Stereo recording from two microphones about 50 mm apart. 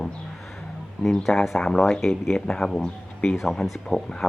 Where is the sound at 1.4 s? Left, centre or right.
Centre.